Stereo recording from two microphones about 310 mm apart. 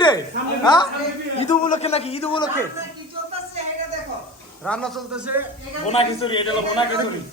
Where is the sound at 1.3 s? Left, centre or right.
Left.